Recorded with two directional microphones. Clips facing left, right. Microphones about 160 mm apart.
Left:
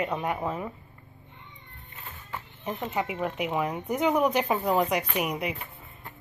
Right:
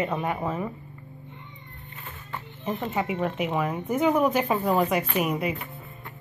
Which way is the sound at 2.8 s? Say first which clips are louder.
Right 2 dB; 10° left (ahead or behind).